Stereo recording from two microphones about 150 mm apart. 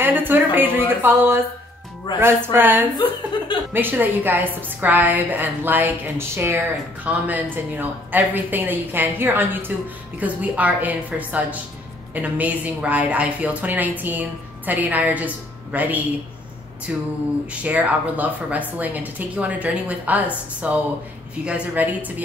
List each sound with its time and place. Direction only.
0.0 s a sound: 15° right (ahead or behind)
2.1 s a woman's voice: 15° right (ahead or behind)
3.3 s chuckle: 30° left (ahead or behind)
3.7 s a woman's voice: 15° right (ahead or behind)